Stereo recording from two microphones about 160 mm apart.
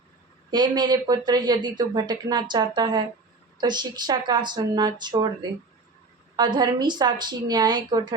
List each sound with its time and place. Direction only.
0.5 s speech: 25° right (ahead or behind)